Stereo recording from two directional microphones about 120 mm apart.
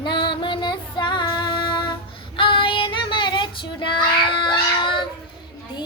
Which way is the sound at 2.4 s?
45° left (ahead or behind).